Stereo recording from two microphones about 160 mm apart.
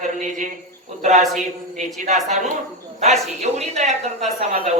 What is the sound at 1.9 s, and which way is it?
Speech, 50° right (ahead or behind).